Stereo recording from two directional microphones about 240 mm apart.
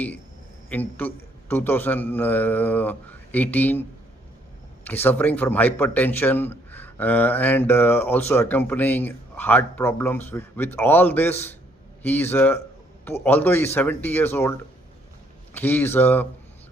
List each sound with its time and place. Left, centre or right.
0.7 s speech: centre
15.5 s speech: centre